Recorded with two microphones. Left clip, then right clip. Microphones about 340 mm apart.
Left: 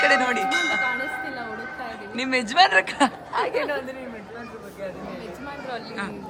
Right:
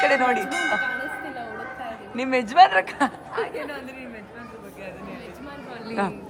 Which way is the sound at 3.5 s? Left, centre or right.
Left.